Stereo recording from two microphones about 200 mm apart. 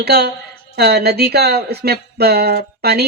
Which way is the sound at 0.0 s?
55° right (ahead or behind).